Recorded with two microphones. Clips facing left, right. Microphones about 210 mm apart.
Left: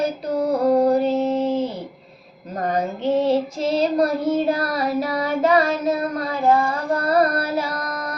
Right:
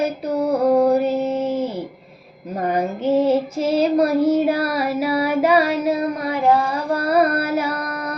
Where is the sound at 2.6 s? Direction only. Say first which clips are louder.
Right 2 dB; 10° right (ahead or behind).